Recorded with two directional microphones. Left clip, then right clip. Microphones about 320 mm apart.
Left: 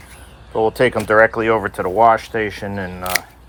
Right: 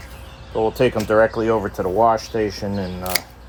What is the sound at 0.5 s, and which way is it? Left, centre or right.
Speech, left.